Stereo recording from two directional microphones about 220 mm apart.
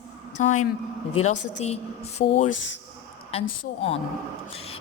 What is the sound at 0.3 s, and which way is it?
A woman's voice, 35° left (ahead or behind).